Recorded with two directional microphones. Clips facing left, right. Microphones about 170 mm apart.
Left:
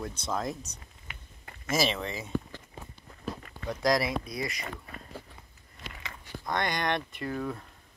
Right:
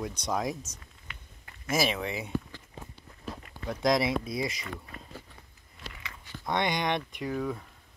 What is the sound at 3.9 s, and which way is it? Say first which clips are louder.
Speech: right 2 dB; 20° right (ahead or behind).